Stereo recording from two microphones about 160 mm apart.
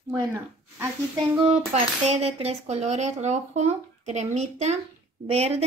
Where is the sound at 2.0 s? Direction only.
40° right (ahead or behind).